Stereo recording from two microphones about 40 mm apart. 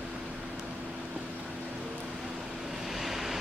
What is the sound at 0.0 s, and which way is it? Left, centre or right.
Vehicle, right.